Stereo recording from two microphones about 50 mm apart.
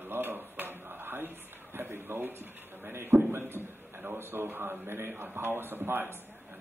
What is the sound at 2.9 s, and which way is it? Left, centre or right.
A man's voice, right.